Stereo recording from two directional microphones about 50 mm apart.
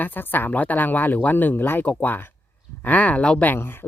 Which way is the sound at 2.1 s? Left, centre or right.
Left.